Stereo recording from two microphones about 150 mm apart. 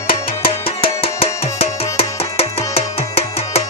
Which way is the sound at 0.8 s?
40° left (ahead or behind).